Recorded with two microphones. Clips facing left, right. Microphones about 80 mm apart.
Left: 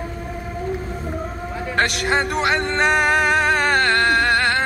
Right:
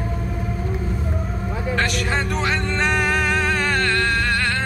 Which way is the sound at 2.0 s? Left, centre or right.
Left.